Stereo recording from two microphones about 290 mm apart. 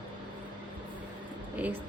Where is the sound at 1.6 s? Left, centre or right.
Centre.